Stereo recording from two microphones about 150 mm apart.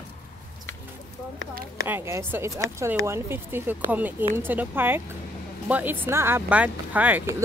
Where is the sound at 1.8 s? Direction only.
20° right (ahead or behind).